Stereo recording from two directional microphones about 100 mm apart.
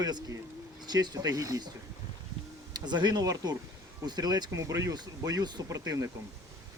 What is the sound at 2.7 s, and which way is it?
Speech, 45° right (ahead or behind).